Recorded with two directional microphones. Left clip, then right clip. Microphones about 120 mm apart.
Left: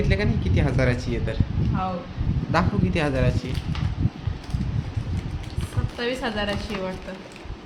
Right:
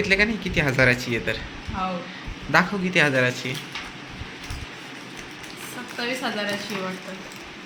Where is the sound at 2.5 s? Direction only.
10° left (ahead or behind).